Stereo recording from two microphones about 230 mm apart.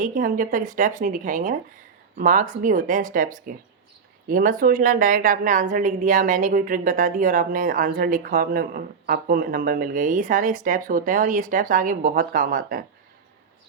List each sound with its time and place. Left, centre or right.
0.0 s a woman's voice: right